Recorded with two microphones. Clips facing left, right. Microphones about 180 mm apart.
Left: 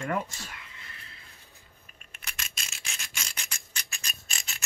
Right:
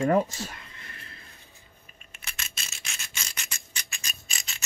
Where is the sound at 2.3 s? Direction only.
5° right (ahead or behind).